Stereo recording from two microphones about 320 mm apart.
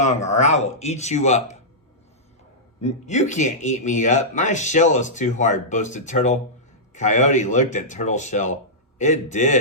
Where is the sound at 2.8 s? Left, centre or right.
Left.